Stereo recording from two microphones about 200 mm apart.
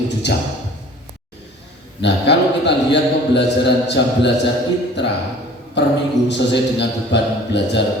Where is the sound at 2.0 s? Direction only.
60° left (ahead or behind).